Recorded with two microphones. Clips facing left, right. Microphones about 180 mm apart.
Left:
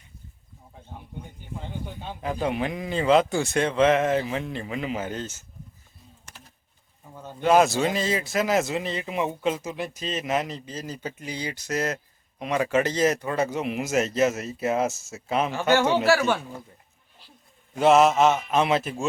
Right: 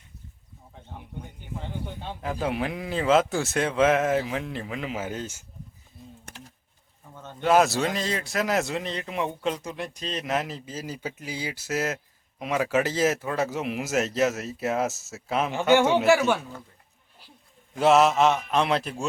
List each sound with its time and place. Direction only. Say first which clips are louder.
1.9 s speech: left 3 dB; centre (ahead or behind)
6.3 s typing: right 2 dB; 55° right (ahead or behind)
7.0 s bird: left 2 dB; 10° left (ahead or behind)
7.4 s speech: left 1 dB; centre (ahead or behind)
15.7 s speech: right 2 dB; 15° right (ahead or behind)
17.7 s speech: left 1 dB; centre (ahead or behind)